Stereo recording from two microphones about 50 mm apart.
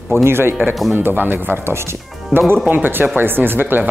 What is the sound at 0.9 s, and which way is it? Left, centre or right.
Speech, right.